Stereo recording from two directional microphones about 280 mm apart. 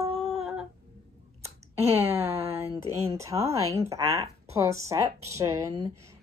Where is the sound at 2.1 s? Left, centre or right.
Centre.